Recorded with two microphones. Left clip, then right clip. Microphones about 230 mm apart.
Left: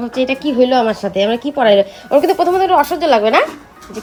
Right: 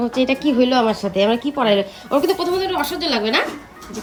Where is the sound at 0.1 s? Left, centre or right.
Centre.